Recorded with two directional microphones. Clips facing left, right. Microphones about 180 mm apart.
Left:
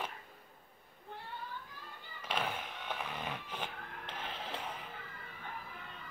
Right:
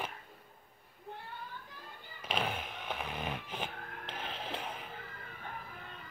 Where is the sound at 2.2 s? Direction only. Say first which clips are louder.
Right 2 dB; 20° right (ahead or behind).